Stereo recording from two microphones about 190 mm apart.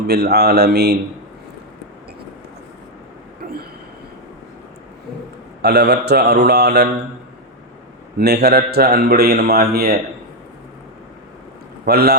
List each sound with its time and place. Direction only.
0.1 s a man's voice: 60° right (ahead or behind)
3.4 s vehicle: 50° right (ahead or behind)
5.6 s a man's voice: 60° right (ahead or behind)
8.2 s a man's voice: 60° right (ahead or behind)
11.9 s a man's voice: 55° right (ahead or behind)